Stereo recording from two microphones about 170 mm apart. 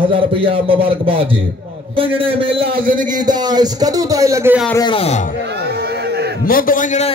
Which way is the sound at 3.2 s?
25° right (ahead or behind).